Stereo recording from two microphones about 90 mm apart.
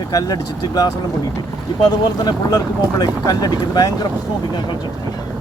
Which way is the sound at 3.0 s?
45° left (ahead or behind).